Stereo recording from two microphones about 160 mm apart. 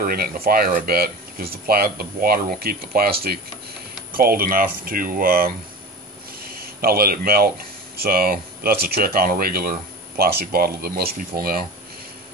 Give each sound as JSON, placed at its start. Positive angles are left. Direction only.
{"t": 0.0, "sound": "speech", "side_deg": -70}
{"t": 6.6, "sound": "speech", "side_deg": -70}